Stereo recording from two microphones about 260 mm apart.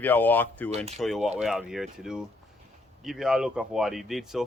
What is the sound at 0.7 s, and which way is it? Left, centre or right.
Speech, right.